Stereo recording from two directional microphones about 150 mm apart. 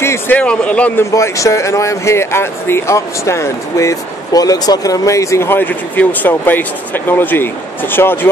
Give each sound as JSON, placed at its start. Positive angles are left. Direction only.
{"t": 0.0, "sound": "a man's voice", "side_deg": 15}
{"t": 1.1, "sound": "a man's voice", "side_deg": 20}